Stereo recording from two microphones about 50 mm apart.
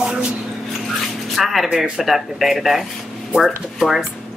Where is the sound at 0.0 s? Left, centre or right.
Centre.